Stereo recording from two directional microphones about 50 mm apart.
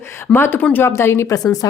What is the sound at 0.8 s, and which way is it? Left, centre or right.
Speech, left.